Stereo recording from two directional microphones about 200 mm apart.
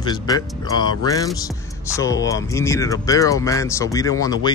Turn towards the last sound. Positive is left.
turn(degrees=20)  # may be behind; listen again after turning